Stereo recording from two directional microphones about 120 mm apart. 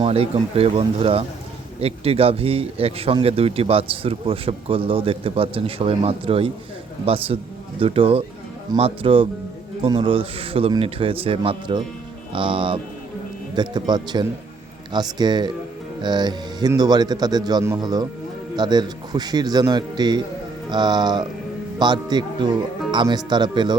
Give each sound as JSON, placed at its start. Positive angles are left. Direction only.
{"t": 0.0, "sound": "speech", "side_deg": -50}